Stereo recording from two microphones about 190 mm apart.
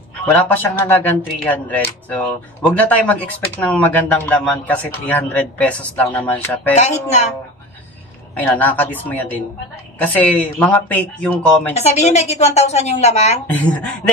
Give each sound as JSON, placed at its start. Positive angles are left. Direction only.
{"t": 0.2, "sound": "speech", "side_deg": 10}
{"t": 6.7, "sound": "a woman's voice", "side_deg": 35}
{"t": 8.4, "sound": "speech", "side_deg": 10}
{"t": 11.7, "sound": "a woman's voice", "side_deg": 35}
{"t": 13.5, "sound": "speech", "side_deg": 5}